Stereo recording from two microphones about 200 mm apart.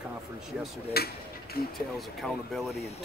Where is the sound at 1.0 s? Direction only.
50° left (ahead or behind).